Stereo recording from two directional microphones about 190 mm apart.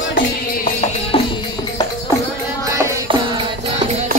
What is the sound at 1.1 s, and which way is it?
Music, 30° left (ahead or behind).